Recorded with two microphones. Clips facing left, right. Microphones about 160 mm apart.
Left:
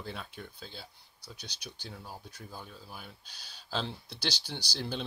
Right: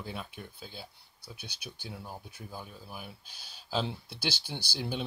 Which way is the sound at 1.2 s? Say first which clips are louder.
Right 1 dB; 55° right (ahead or behind).